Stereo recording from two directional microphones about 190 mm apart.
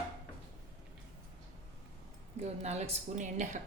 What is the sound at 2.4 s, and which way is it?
A woman's voice, 35° right (ahead or behind).